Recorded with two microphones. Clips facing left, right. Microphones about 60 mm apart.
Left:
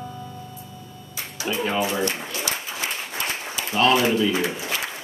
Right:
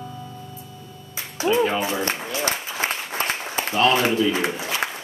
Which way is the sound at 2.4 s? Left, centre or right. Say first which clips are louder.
Right 4 dB; right.